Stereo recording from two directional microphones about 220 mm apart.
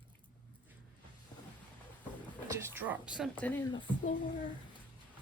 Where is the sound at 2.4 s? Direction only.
10° right (ahead or behind); by 3.7 s 10° left (ahead or behind).